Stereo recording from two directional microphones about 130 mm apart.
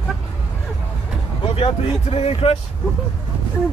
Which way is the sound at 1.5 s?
50° left (ahead or behind).